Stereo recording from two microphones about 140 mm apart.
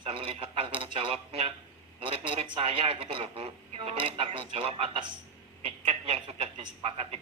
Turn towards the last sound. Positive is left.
turn(degrees=-45)  # may be behind; listen again after turning